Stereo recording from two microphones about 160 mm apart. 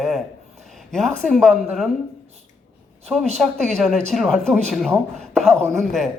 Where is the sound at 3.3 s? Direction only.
5° left (ahead or behind).